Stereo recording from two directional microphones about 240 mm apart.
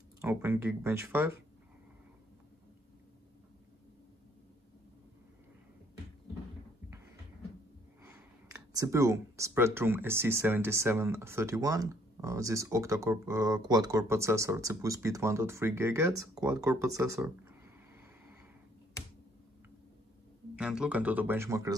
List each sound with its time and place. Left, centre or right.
0.2 s speech: centre
8.5 s speech: centre
20.5 s speech: centre